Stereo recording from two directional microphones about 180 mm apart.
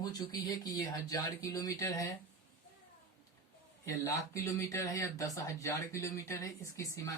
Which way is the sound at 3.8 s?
15° left (ahead or behind).